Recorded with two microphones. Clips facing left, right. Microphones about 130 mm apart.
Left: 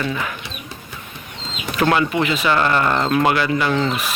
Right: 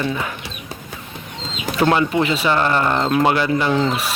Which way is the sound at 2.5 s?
20° right (ahead or behind).